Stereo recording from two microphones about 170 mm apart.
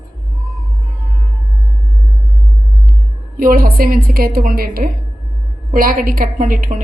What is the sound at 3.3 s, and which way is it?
A woman's voice, 55° right (ahead or behind).